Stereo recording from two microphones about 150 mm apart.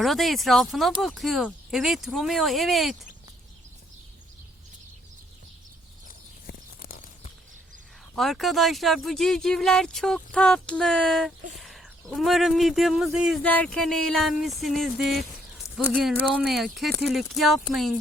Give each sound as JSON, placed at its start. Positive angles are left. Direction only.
{"t": 0.0, "sound": "speech", "side_deg": 0}
{"t": 6.5, "sound": "a sound", "side_deg": 75}
{"t": 8.1, "sound": "speech", "side_deg": 0}
{"t": 13.4, "sound": "speech", "side_deg": 10}